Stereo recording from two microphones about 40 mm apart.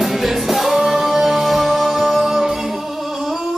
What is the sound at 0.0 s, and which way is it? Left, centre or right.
Music, centre.